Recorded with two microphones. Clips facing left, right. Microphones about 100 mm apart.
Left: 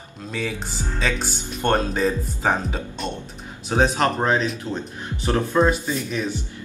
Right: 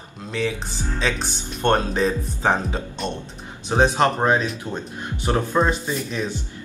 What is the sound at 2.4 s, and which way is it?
A man's voice, centre (ahead or behind).